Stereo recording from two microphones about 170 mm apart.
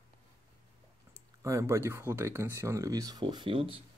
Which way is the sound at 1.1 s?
20° right (ahead or behind).